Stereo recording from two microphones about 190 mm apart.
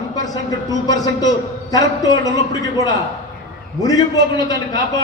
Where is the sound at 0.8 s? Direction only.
20° left (ahead or behind).